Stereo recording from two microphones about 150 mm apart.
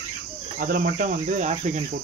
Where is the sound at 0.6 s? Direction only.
70° right (ahead or behind); by 1.8 s 50° right (ahead or behind).